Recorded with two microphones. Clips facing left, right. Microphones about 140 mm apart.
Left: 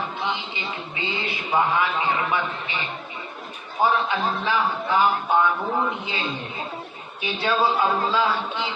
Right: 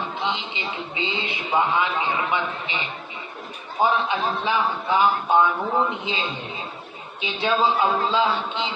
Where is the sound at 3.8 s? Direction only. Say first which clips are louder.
Even; 20° right (ahead or behind).